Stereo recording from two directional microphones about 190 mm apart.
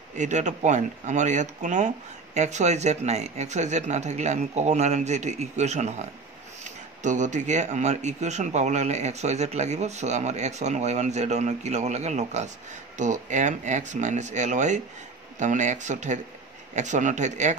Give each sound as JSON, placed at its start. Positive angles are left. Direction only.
{"t": 0.1, "sound": "speech", "side_deg": -40}